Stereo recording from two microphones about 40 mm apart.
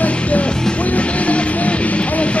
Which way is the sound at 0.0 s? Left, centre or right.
Left.